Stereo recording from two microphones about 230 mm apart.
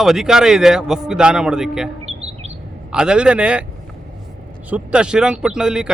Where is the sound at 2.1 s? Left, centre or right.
Right.